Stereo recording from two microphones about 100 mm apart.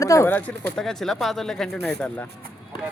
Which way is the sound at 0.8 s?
5° left (ahead or behind).